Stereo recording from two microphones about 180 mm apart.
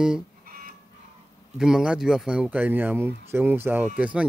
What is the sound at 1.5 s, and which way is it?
Speech, 5° right (ahead or behind).